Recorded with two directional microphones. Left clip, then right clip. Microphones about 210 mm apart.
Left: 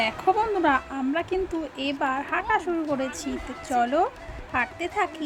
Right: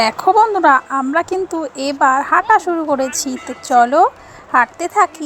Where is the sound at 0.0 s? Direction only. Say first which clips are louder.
Right 11 dB; 25° right (ahead or behind).